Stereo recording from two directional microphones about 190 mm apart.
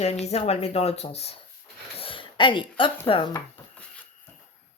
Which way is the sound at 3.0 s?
25° left (ahead or behind).